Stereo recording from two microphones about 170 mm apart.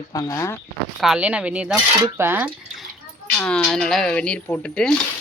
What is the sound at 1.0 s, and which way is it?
Speech, 5° right (ahead or behind).